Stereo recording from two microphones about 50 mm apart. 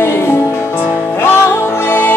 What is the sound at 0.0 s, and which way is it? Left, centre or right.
Music, left.